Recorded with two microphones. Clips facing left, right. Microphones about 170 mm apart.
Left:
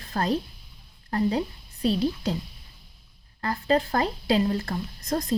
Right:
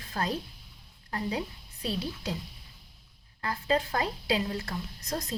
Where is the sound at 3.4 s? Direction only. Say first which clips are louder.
Left 5 dB; 45° left (ahead or behind).